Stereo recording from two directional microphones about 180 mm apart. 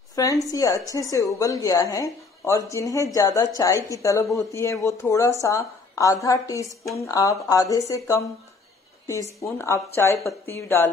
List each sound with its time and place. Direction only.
0.1 s a woman's voice: 20° left (ahead or behind)
9.0 s a woman's voice: 15° left (ahead or behind)